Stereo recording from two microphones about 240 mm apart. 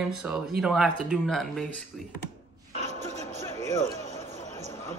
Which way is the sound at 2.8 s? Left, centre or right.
Right.